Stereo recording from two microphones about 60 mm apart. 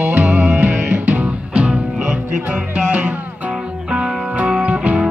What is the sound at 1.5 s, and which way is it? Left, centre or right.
Music, centre.